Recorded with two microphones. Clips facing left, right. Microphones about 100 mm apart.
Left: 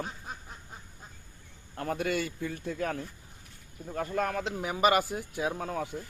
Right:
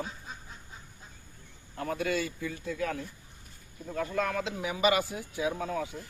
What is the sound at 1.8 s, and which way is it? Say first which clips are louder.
Speech: even; 55° left (ahead or behind).